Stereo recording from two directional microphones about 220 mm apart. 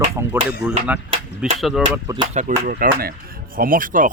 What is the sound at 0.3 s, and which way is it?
Speech, 10° right (ahead or behind).